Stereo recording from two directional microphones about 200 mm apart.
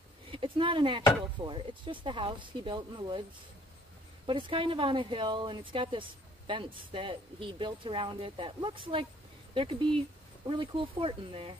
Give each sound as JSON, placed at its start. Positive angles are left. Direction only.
{"t": 0.3, "sound": "a woman's voice", "side_deg": -25}
{"t": 4.3, "sound": "a woman's voice", "side_deg": -25}